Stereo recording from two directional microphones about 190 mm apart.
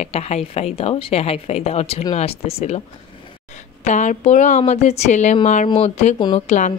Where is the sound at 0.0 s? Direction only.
35° left (ahead or behind).